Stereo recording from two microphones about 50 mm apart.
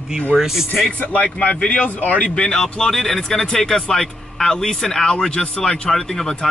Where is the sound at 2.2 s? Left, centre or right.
Centre.